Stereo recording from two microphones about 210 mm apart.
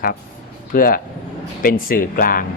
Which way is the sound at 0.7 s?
40° left (ahead or behind).